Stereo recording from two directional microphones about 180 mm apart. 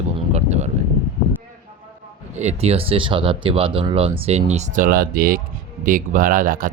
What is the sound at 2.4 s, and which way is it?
Speech, 35° right (ahead or behind).